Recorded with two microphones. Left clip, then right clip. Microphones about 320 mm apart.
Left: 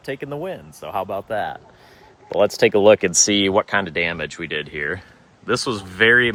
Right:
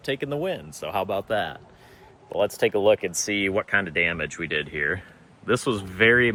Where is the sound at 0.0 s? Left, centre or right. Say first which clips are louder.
Right 1 dB; centre.